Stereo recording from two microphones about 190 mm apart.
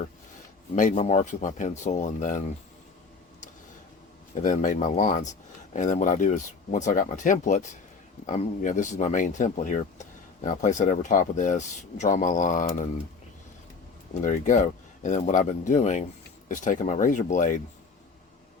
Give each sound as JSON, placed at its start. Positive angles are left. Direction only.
{"t": 0.8, "sound": "speech", "side_deg": 40}
{"t": 4.4, "sound": "speech", "side_deg": 40}
{"t": 14.1, "sound": "speech", "side_deg": 40}